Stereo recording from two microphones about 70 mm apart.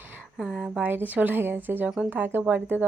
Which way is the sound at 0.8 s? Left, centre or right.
Right.